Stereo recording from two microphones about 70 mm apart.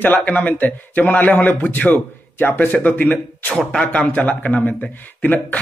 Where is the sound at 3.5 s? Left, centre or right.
Centre.